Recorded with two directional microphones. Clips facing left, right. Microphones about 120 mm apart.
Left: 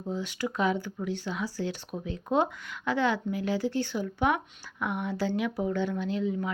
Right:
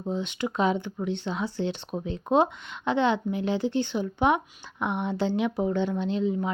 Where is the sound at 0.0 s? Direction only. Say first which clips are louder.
Right 3 dB; 20° right (ahead or behind).